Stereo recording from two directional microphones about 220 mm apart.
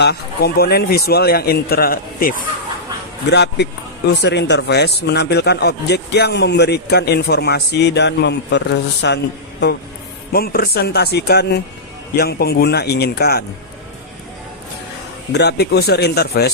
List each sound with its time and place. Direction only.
0.0 s speech: 50° left (ahead or behind)
15.3 s speech: 50° left (ahead or behind)